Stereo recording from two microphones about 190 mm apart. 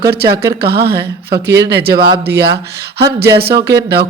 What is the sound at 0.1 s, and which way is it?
Speech, 55° right (ahead or behind).